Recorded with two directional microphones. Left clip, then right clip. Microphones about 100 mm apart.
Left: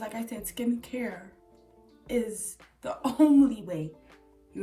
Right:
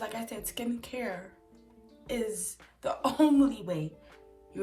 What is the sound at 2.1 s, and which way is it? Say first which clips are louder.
Speech: left 3 dB; 20° right (ahead or behind).